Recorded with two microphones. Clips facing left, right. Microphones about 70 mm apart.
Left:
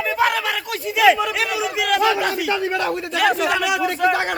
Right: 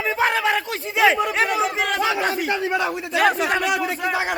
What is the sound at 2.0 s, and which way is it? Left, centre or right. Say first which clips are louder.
Speech: left 3 dB; right.